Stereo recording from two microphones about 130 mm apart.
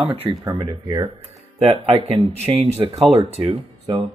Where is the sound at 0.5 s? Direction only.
35° right (ahead or behind).